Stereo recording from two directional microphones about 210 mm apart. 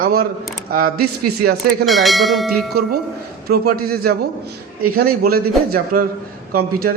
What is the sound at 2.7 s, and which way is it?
A man's voice, 50° right (ahead or behind).